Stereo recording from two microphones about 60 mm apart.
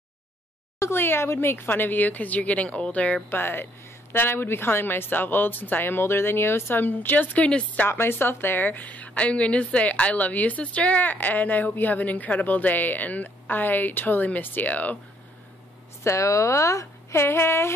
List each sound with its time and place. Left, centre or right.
0.7 s a woman's voice: left
3.3 s a woman's voice: left
7.4 s speech: centre
7.9 s a woman's voice: left
16.0 s a woman's voice: left